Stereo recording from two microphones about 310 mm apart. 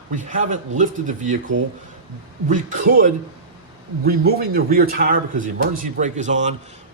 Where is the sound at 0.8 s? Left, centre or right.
Right.